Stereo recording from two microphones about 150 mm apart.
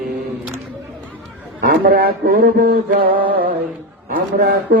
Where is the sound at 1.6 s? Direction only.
75° right (ahead or behind).